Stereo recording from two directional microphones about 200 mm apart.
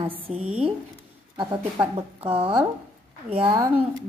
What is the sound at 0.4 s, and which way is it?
Speech, 5° right (ahead or behind).